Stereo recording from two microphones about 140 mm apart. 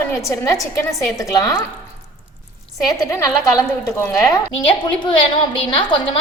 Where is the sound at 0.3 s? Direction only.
25° left (ahead or behind).